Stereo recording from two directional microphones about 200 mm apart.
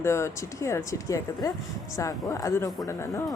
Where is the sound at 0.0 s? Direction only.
15° left (ahead or behind).